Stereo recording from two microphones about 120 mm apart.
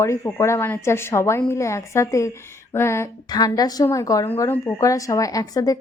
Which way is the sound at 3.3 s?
30° left (ahead or behind).